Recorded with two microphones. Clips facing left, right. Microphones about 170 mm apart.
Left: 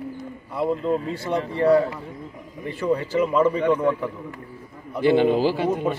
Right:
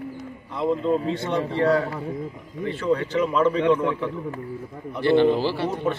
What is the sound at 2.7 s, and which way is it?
A man's voice, 10° left (ahead or behind).